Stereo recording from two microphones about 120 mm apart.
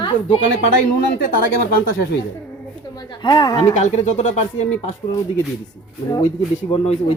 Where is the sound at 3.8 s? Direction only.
70° left (ahead or behind).